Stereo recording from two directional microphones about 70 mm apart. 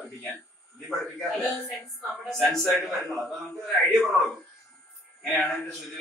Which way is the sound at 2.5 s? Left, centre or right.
Centre.